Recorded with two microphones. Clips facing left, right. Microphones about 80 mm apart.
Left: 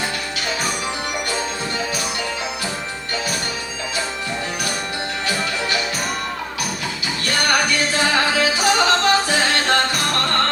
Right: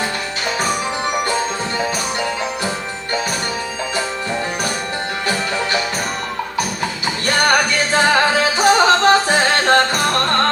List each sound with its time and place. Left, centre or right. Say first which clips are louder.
7.9 s music: right 6 dB; right